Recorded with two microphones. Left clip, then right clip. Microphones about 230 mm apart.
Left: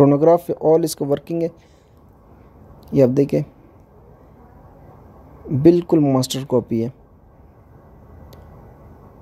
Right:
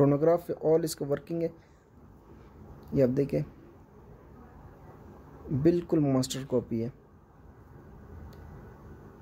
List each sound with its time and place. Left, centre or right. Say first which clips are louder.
0.0 s speech: left 11 dB; left
2.9 s speech: left 11 dB; left
5.6 s speech: left 12 dB; left